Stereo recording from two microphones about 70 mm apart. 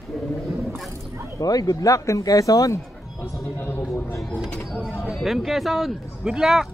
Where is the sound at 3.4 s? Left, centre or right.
Left.